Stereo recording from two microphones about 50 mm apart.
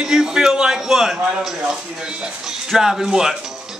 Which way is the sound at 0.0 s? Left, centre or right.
Centre.